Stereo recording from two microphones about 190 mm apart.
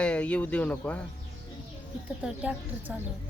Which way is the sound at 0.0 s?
5° left (ahead or behind).